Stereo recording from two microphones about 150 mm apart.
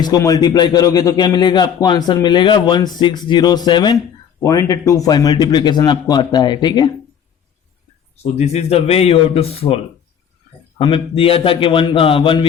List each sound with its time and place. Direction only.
0.0 s speech: 25° left (ahead or behind)
8.1 s a man's voice: 45° left (ahead or behind)